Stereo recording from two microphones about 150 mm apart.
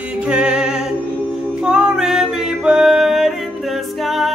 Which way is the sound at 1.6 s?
5° right (ahead or behind).